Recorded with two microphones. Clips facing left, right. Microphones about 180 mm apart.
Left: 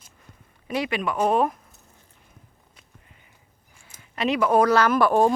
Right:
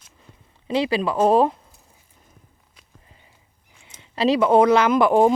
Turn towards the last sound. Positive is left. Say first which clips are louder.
# right 3 dB
turn(degrees=-15)  # may be behind; listen again after turning